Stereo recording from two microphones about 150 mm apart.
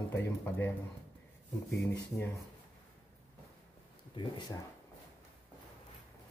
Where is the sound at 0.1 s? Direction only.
15° left (ahead or behind).